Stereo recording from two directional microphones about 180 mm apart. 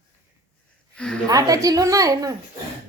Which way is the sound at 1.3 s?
20° right (ahead or behind).